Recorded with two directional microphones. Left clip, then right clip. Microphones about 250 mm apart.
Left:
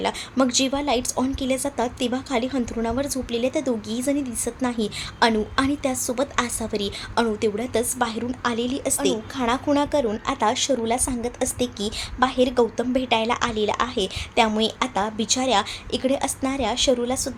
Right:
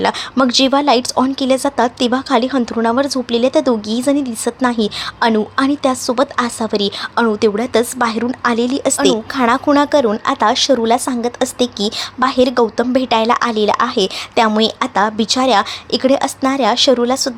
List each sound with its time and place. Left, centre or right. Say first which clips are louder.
0.0 s a woman's voice: right 8 dB; centre